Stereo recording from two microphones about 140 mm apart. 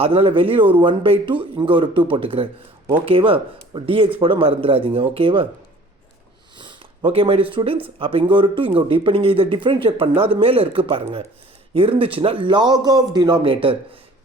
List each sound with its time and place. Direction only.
0.0 s speech: 40° right (ahead or behind)
6.6 s a sound: 35° right (ahead or behind)
7.5 s speech: 40° right (ahead or behind)